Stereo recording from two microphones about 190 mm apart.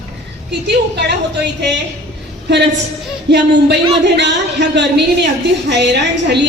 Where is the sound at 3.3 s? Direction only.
65° right (ahead or behind).